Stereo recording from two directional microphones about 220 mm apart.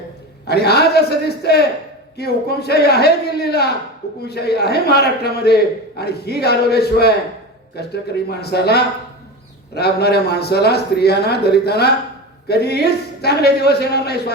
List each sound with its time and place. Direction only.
0.4 s a man's voice: 45° left (ahead or behind)